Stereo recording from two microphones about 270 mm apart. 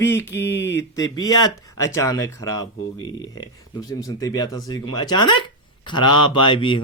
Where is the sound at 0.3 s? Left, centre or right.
Centre.